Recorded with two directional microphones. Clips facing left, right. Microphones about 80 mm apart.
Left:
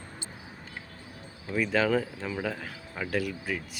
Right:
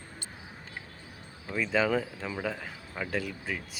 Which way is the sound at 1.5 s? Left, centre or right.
Centre.